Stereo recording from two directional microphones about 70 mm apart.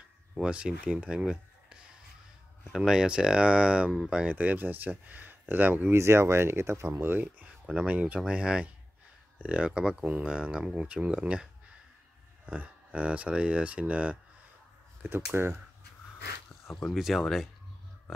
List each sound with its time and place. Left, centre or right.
0.3 s speech: centre
2.7 s speech: centre
3.0 s speech: centre
5.9 s speech: right
7.1 s speech: right
7.4 s a sound: centre
7.8 s speech: centre
12.4 s speech: centre
15.0 s speech: right
16.9 s speech: centre